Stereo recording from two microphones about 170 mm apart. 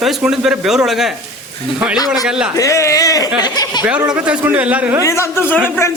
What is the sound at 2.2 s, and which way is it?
Speech, 5° right (ahead or behind).